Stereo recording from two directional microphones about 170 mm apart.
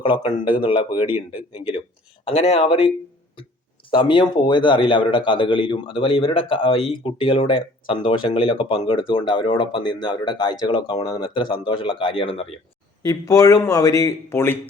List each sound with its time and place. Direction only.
0.0 s a man's voice: 30° left (ahead or behind)
2.2 s a man's voice: 30° left (ahead or behind)
13.0 s a man's voice: 20° left (ahead or behind)